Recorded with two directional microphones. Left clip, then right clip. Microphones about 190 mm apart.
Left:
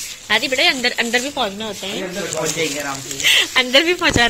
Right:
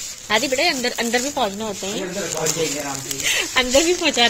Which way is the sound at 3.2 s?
Centre (ahead or behind).